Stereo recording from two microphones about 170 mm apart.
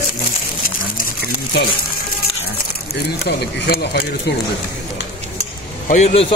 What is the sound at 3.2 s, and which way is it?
Speech, 75° left (ahead or behind).